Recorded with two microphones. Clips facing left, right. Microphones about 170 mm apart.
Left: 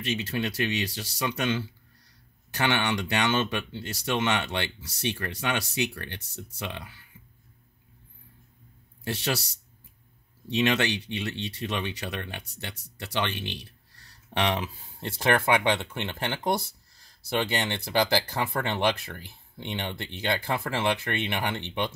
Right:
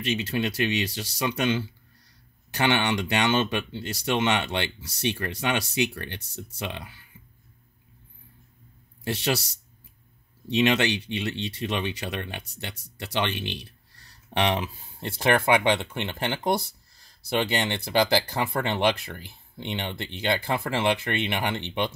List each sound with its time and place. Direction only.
0.0 s speech: 20° right (ahead or behind)
9.0 s speech: 15° right (ahead or behind)
10.5 s speech: 20° right (ahead or behind)